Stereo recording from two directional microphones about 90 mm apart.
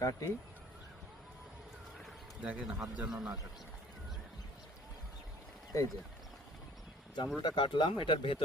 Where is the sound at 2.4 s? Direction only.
10° right (ahead or behind).